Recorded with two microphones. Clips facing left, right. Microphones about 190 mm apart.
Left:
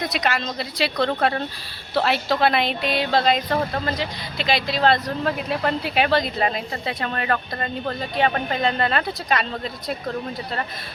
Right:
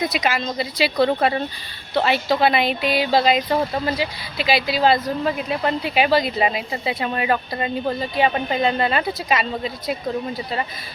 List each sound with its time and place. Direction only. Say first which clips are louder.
0.0 s speech: right 2 dB; centre (ahead or behind)